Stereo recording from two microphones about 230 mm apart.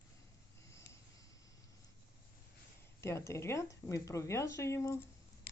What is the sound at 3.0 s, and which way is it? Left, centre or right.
Speech, centre.